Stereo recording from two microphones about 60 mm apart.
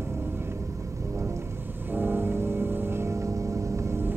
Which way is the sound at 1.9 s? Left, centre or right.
Right.